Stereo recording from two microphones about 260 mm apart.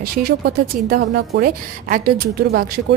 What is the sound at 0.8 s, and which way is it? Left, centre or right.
A woman's voice, right.